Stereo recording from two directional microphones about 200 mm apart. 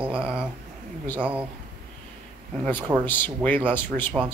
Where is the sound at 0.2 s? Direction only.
5° right (ahead or behind).